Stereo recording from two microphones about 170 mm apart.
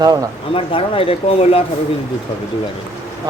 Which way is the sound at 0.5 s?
35° left (ahead or behind).